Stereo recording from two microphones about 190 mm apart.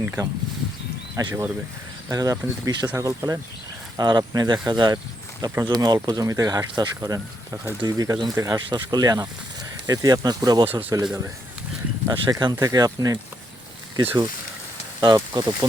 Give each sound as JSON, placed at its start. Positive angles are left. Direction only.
{"t": 0.0, "sound": "speech", "side_deg": -10}
{"t": 15.0, "sound": "speech", "side_deg": -20}